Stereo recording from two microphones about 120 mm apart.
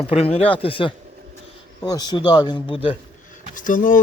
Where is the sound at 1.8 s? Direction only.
30° left (ahead or behind); by 3.0 s 45° left (ahead or behind).